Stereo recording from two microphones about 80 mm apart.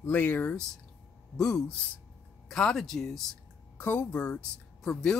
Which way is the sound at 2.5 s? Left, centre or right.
Centre.